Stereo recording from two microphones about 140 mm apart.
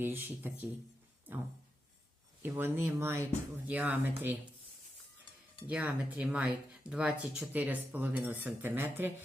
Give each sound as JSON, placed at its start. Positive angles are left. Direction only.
{"t": 0.0, "sound": "speech", "side_deg": -15}
{"t": 2.4, "sound": "speech", "side_deg": -15}
{"t": 5.6, "sound": "speech", "side_deg": -10}